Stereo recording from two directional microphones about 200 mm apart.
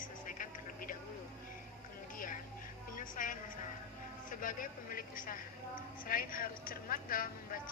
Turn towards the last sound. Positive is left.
turn(degrees=45)  # may be behind; listen again after turning